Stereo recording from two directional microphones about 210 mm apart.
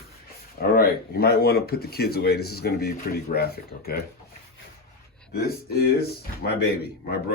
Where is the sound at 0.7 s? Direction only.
45° left (ahead or behind).